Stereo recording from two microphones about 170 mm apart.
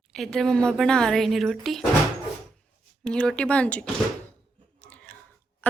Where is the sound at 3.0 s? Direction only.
5° left (ahead or behind).